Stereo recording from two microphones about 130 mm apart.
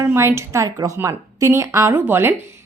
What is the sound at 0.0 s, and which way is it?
A woman's voice, 20° right (ahead or behind).